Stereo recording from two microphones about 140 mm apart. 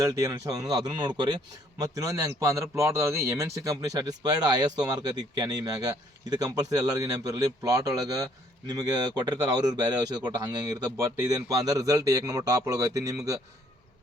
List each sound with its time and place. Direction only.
0.0 s speech: 25° right (ahead or behind)